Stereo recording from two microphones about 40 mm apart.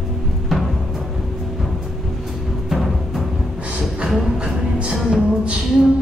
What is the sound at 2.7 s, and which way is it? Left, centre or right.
Music, centre.